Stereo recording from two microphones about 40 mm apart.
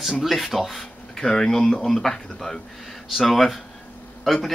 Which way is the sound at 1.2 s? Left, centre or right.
Centre.